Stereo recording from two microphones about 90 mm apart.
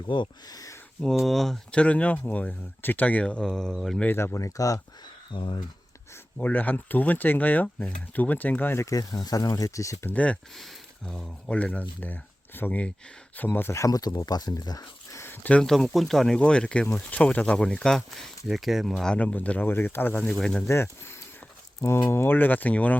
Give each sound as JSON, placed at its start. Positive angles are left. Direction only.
{"t": 0.1, "sound": "speech", "side_deg": 65}
{"t": 0.5, "sound": "a sound", "side_deg": 40}
{"t": 1.2, "sound": "speech", "side_deg": 0}
{"t": 1.7, "sound": "speech", "side_deg": 15}
{"t": 4.0, "sound": "speech", "side_deg": 25}
{"t": 5.3, "sound": "speech", "side_deg": 65}
{"t": 6.3, "sound": "speech", "side_deg": 20}
{"t": 10.1, "sound": "speech", "side_deg": 15}
{"t": 10.6, "sound": "speech", "side_deg": 5}
{"t": 13.7, "sound": "speech", "side_deg": 40}
{"t": 15.2, "sound": "a sound", "side_deg": 20}
{"t": 15.6, "sound": "speech", "side_deg": 5}
{"t": 20.3, "sound": "speech", "side_deg": 10}
{"t": 20.7, "sound": "speech", "side_deg": 30}